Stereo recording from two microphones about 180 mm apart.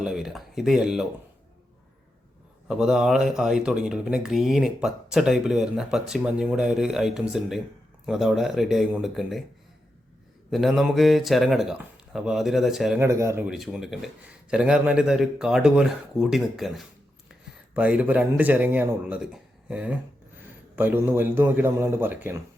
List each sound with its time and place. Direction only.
0.0 s speech: 5° right (ahead or behind)
2.6 s speech: 5° right (ahead or behind)
10.5 s speech: centre (ahead or behind)
13.0 s speech: 15° right (ahead or behind)
13.5 s speech: centre (ahead or behind)